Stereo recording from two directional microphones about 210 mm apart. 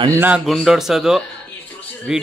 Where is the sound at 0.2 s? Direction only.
5° right (ahead or behind).